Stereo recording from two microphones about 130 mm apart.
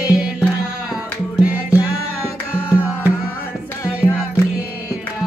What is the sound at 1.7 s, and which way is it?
Music, 20° left (ahead or behind).